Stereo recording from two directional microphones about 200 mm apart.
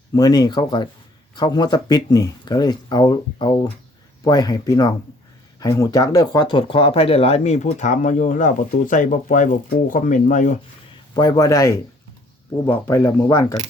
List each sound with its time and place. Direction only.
0.1 s speech: 20° left (ahead or behind); by 10.5 s 40° left (ahead or behind)
11.1 s speech: 20° left (ahead or behind)